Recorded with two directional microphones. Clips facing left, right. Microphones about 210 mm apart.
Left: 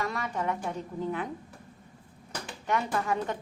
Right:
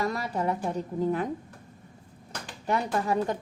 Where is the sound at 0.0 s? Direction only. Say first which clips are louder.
Right 3 dB; 35° right (ahead or behind).